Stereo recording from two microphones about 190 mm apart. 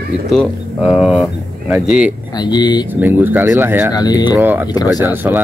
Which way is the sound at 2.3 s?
20° left (ahead or behind).